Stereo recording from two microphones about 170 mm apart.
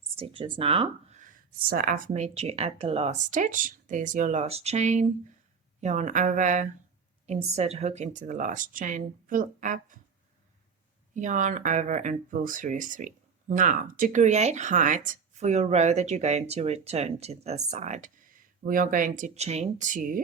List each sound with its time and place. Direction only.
0.2 s speech: 30° right (ahead or behind); by 10.0 s 50° right (ahead or behind)
11.1 s speech: 45° right (ahead or behind)